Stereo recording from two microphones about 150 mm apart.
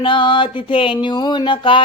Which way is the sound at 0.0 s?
35° left (ahead or behind).